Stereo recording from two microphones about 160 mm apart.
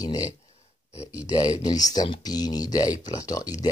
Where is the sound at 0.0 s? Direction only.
20° left (ahead or behind).